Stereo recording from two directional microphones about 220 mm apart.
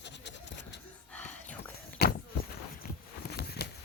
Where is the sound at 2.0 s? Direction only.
45° left (ahead or behind).